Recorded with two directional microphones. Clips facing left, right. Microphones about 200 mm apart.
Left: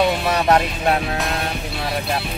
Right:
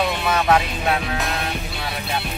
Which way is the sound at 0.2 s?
40° left (ahead or behind).